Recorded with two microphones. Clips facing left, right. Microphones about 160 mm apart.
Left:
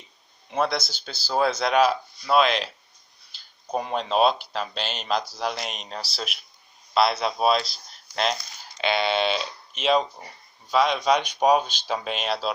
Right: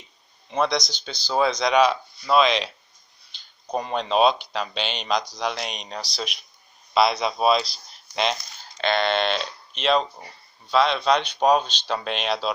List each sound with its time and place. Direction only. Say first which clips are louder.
0.5 s speech: right 2 dB; 5° left (ahead or behind)